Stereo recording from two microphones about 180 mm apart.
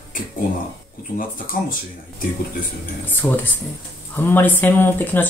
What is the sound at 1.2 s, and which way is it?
Speech, 50° left (ahead or behind).